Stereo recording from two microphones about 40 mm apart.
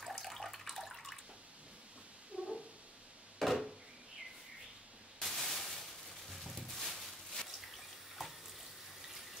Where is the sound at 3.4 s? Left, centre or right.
Centre.